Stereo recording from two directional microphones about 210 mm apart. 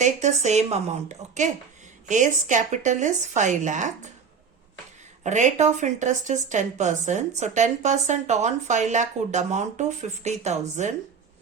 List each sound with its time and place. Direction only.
0.0 s speech: 35° right (ahead or behind)
5.2 s speech: 35° right (ahead or behind)